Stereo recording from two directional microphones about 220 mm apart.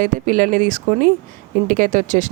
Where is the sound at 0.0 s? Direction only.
40° right (ahead or behind).